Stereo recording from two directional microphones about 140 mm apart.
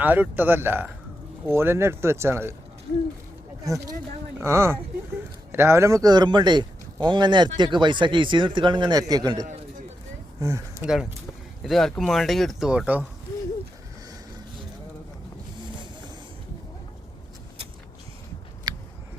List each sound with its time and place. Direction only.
0.0 s speech: 10° right (ahead or behind)
3.6 s a man's voice: 25° right (ahead or behind)
11.6 s speech: centre (ahead or behind)
18.7 s a sound: 30° right (ahead or behind)